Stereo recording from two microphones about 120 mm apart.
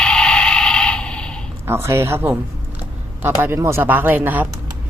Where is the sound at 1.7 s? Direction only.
20° right (ahead or behind).